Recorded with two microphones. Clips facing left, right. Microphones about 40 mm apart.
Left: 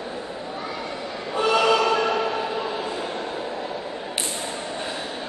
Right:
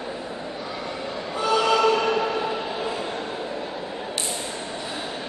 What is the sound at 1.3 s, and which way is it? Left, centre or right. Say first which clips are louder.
Train: left 2 dB; left.